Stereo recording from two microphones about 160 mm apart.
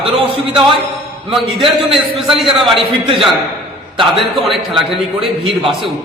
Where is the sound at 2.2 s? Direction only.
30° right (ahead or behind).